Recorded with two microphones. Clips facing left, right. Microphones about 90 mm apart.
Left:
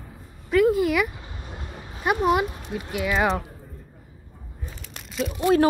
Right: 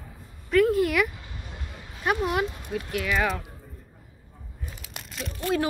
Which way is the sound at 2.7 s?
5° left (ahead or behind).